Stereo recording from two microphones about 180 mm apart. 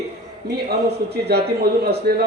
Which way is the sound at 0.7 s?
65° right (ahead or behind).